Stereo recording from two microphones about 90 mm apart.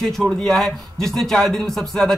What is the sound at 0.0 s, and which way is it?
Speech, 5° left (ahead or behind).